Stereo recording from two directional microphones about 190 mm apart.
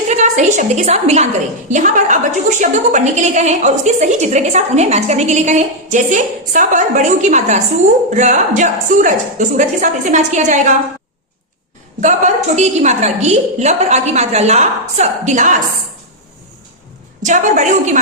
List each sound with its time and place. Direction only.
0.1 s a woman's voice: 40° right (ahead or behind)
11.9 s a woman's voice: 40° right (ahead or behind)
17.2 s a woman's voice: 40° right (ahead or behind)